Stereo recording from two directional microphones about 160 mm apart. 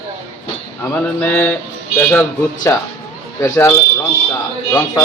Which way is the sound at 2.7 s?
15° left (ahead or behind).